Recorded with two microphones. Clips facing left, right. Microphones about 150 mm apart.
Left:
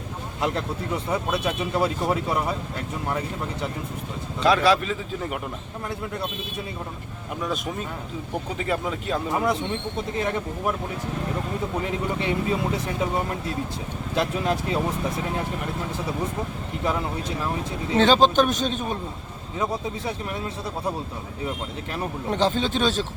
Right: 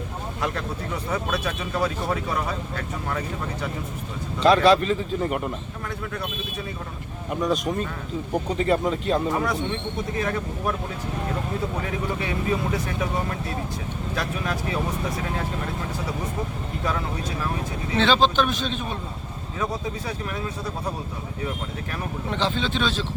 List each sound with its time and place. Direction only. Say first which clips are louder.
1.1 s speech: left 1 dB; 20° left (ahead or behind)
4.4 s speech: right 3 dB; 5° left (ahead or behind)
7.4 s speech: right 5 dB; 5° left (ahead or behind)
9.3 s speech: left 1 dB; 20° left (ahead or behind)
11.9 s speech: left 2 dB; 25° left (ahead or behind)
14.2 s speech: left 5 dB; 25° left (ahead or behind)
17.9 s a man's voice: left 3 dB; 45° left (ahead or behind)
22.3 s a man's voice: left 3 dB; 45° left (ahead or behind)